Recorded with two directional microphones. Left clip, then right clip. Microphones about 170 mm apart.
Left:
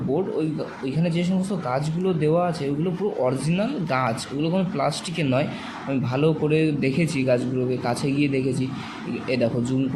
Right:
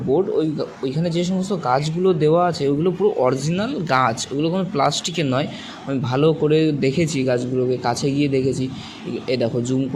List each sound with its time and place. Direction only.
1.0 s speech: 35° right (ahead or behind)